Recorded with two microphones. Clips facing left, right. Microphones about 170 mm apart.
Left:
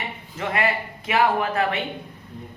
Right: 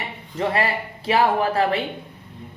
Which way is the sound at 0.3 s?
30° right (ahead or behind).